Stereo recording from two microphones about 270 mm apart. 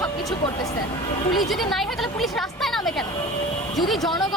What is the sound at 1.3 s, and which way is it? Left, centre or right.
A woman's voice, centre.